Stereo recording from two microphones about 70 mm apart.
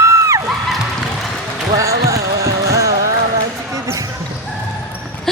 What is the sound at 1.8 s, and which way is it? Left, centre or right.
Music, right.